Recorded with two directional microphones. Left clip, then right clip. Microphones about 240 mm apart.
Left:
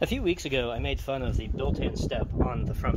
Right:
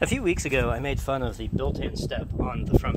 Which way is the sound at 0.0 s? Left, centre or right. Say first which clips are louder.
Right 3 dB; centre.